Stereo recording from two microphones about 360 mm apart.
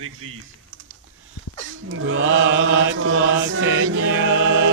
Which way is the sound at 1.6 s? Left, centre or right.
Right.